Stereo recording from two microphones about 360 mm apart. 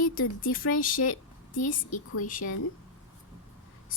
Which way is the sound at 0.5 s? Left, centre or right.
Left.